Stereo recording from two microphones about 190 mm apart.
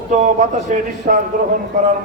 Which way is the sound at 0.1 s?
45° right (ahead or behind).